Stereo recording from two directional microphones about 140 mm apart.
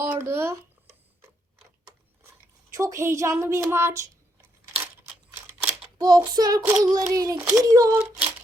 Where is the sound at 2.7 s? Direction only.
20° right (ahead or behind).